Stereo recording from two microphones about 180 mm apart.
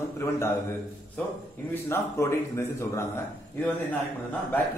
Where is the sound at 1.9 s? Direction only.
15° left (ahead or behind).